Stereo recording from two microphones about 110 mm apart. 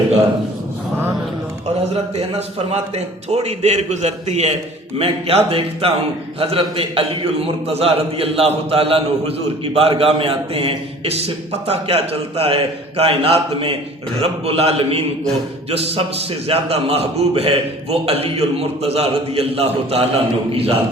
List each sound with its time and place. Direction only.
1.9 s a man's voice: 70° right (ahead or behind)
4.9 s a man's voice: 60° right (ahead or behind)